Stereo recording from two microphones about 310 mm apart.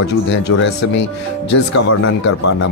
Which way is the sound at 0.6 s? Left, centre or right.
Left.